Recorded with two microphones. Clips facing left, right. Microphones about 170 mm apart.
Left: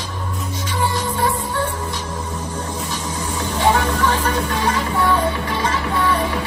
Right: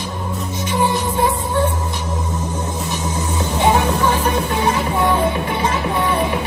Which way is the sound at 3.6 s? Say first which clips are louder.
Right 2 dB; 15° right (ahead or behind).